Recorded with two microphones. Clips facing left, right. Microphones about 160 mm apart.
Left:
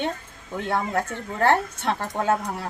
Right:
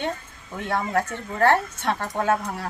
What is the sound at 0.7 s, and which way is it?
Speech, 25° left (ahead or behind).